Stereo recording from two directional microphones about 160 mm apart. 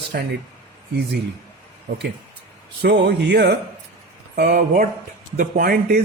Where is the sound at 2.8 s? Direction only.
90° right.